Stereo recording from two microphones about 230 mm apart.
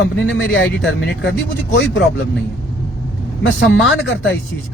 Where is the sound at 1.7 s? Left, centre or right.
Left.